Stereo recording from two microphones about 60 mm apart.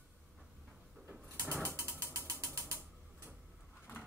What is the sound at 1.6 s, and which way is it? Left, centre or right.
Ratchet, right.